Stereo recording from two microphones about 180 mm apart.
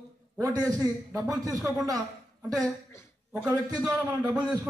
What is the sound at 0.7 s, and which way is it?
Speech, 20° right (ahead or behind).